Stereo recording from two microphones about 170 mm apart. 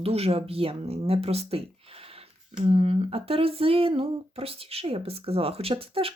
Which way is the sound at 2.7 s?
35° right (ahead or behind).